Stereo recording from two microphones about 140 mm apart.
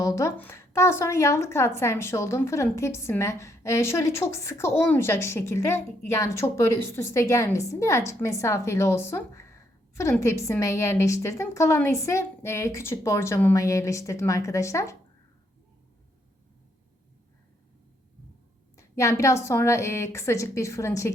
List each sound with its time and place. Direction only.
0.0 s a woman's voice: 20° left (ahead or behind)
18.8 s a woman's voice: 20° left (ahead or behind)